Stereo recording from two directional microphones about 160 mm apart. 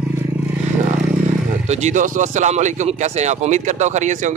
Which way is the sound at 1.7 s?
45° right (ahead or behind).